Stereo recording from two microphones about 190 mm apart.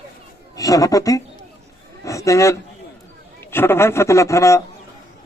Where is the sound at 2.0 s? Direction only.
15° left (ahead or behind).